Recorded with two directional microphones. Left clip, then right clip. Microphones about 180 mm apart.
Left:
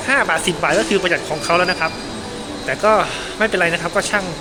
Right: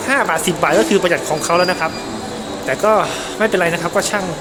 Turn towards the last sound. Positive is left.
turn(degrees=-15)  # may be behind; listen again after turning